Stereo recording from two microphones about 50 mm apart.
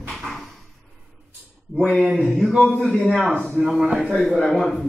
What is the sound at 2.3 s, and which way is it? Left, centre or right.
Speech, centre.